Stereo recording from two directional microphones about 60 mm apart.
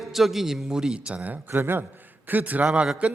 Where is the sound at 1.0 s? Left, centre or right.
Right.